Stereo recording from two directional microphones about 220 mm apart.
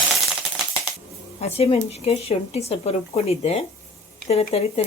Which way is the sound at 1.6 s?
30° left (ahead or behind).